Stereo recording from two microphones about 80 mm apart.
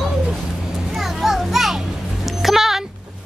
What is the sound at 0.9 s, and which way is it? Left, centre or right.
Children playing, centre.